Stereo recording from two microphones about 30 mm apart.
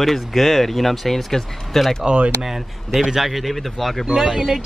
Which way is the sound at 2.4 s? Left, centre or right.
Centre.